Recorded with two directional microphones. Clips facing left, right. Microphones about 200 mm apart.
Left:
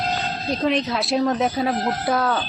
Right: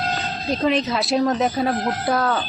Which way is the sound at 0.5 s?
Centre (ahead or behind).